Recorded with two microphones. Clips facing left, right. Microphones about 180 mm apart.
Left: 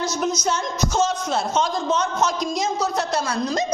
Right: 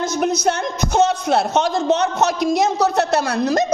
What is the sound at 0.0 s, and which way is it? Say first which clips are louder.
A man's voice: right 5 dB; 60° right (ahead or behind).